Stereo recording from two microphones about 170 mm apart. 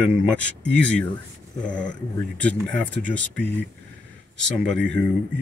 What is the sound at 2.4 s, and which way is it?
Speech, 10° left (ahead or behind).